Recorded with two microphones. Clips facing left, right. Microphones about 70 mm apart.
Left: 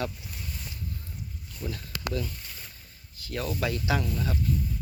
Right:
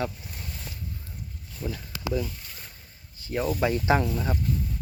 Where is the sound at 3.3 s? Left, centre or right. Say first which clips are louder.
Right 5 dB; right.